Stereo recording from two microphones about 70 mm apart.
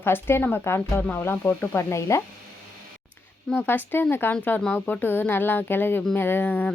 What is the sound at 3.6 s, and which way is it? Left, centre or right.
A woman's voice, left.